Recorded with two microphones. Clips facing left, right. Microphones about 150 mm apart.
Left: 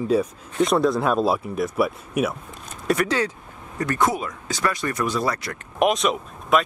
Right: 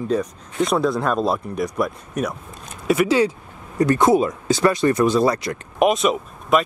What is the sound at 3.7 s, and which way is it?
Speech, 25° right (ahead or behind).